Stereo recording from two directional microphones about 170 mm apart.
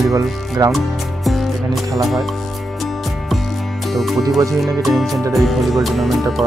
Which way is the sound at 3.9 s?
Centre (ahead or behind).